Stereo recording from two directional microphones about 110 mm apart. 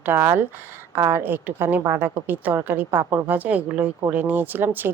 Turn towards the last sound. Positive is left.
turn(degrees=-20)  # may be behind; listen again after turning